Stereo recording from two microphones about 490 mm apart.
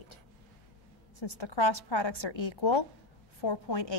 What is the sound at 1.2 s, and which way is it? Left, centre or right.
A woman's voice, left.